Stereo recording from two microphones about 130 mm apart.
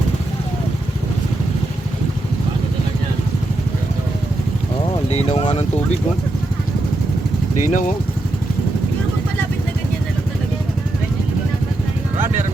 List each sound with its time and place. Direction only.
5.1 s speech: 50° left (ahead or behind)
7.7 s speech: 90° left